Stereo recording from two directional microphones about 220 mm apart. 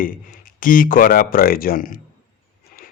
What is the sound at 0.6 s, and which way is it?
Speech, 40° left (ahead or behind).